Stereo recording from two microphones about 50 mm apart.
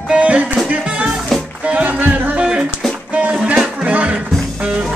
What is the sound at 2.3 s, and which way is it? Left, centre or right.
Music, centre.